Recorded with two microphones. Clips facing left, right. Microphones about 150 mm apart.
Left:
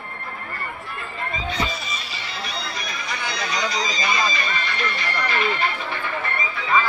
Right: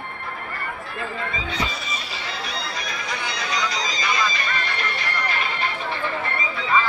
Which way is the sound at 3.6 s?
90° right.